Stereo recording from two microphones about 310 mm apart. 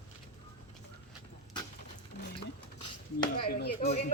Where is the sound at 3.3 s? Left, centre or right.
Left.